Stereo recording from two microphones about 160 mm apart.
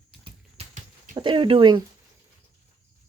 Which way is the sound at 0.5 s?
50° right (ahead or behind).